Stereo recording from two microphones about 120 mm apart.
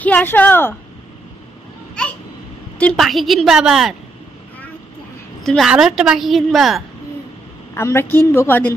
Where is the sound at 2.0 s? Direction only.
5° left (ahead or behind).